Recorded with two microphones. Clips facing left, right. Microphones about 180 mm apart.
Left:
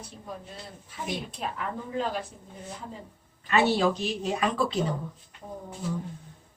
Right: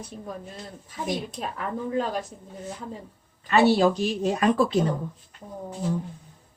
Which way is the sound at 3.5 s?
40° right (ahead or behind).